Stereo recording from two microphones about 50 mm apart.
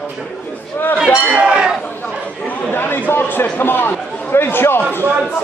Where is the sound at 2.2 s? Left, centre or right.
Left.